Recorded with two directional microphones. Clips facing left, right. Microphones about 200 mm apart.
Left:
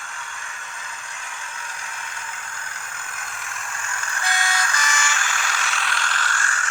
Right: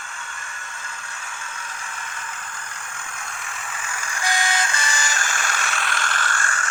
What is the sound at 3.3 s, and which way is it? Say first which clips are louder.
Vehicle: even; centre (ahead or behind).